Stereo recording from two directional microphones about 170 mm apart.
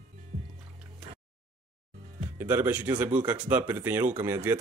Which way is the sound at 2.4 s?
10° right (ahead or behind).